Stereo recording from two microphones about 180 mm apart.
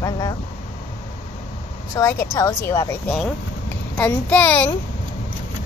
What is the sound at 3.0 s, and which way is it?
Speech, centre (ahead or behind).